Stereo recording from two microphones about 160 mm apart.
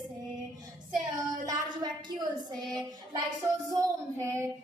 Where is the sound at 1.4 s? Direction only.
25° right (ahead or behind).